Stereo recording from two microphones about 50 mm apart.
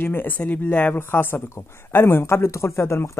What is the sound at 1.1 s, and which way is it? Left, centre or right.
Speech, left.